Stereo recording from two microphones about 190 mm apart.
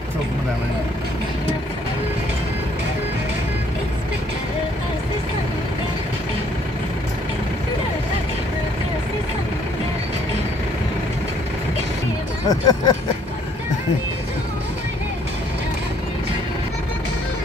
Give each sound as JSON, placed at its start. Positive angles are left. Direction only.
{"t": 12.4, "sound": "speech", "side_deg": 20}